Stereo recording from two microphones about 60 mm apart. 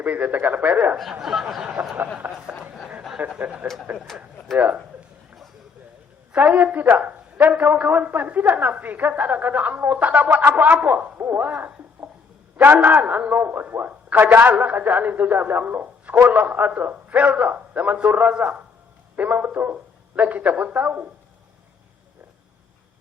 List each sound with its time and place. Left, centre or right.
0.0 s speech: right
1.2 s speech: centre
2.2 s a sound: right
3.9 s speech: centre
4.5 s speech: right
6.3 s a man's voice: right
14.5 s speech: right